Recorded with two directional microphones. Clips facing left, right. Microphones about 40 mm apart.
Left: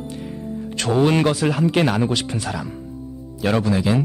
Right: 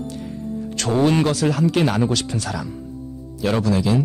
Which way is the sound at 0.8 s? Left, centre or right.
Left.